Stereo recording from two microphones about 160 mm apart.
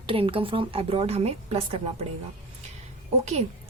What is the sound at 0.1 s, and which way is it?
A woman's voice, 35° right (ahead or behind).